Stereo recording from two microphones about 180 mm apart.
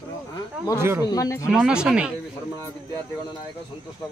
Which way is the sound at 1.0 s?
20° left (ahead or behind).